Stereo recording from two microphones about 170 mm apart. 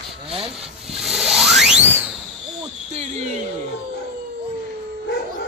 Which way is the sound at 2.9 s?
40° right (ahead or behind).